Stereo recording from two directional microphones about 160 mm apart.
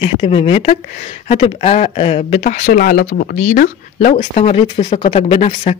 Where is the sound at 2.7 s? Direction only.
65° left (ahead or behind).